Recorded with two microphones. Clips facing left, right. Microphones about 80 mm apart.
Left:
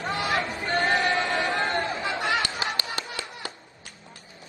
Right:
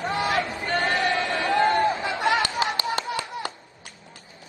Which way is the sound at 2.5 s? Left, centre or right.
Right.